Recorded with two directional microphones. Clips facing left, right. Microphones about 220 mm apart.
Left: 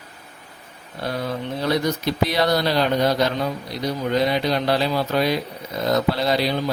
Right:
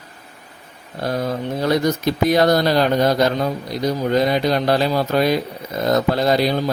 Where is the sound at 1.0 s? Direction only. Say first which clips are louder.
Right 4 dB; 45° right (ahead or behind).